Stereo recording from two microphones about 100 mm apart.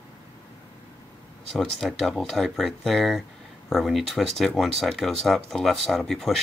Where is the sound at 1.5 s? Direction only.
5° left (ahead or behind).